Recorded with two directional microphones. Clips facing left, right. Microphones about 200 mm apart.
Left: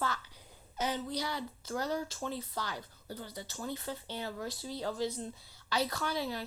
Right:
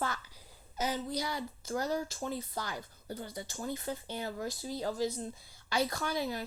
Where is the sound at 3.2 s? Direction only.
50° right (ahead or behind).